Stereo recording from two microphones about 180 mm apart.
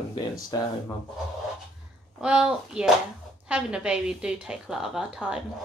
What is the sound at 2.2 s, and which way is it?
A woman's voice, 5° right (ahead or behind).